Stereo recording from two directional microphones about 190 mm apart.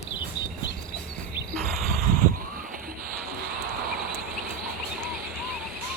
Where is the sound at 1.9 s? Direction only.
45° right (ahead or behind).